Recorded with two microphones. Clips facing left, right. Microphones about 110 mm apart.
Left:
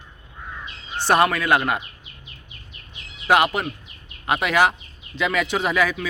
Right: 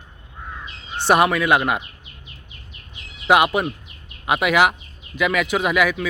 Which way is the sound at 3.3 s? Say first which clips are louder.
Right 2 dB; 15° right (ahead or behind).